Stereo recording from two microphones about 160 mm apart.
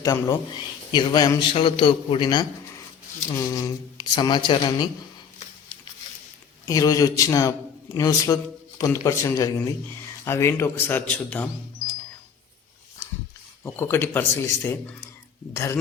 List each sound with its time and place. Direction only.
0.0 s a man's voice: 20° left (ahead or behind)
6.7 s a man's voice: 20° left (ahead or behind)
13.7 s speech: 15° left (ahead or behind)